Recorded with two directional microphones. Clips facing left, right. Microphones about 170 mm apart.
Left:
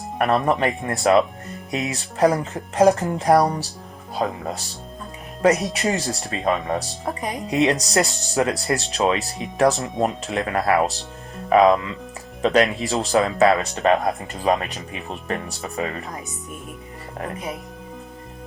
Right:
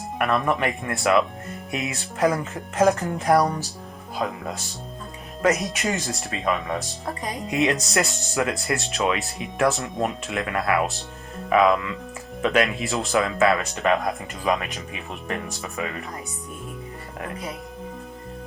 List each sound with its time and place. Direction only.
0.2 s music: 35° left (ahead or behind)
5.4 s speech: 35° left (ahead or behind)
5.7 s music: 35° left (ahead or behind)
11.4 s speech: 35° left (ahead or behind)
12.4 s music: 35° left (ahead or behind)